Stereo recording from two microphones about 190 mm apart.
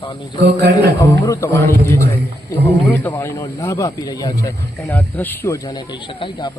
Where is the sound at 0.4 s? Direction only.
65° right (ahead or behind).